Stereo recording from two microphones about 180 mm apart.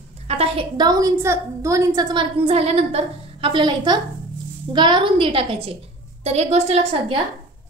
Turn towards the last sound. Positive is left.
turn(degrees=-35)  # may be behind; listen again after turning